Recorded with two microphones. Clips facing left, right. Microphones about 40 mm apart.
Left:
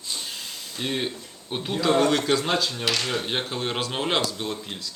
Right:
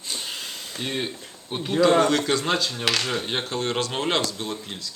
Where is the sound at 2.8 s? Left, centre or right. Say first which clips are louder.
Right 1 dB; right.